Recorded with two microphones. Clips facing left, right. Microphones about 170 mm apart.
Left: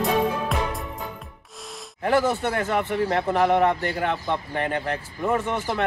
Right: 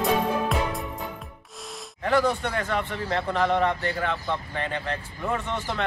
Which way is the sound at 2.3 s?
10° left (ahead or behind).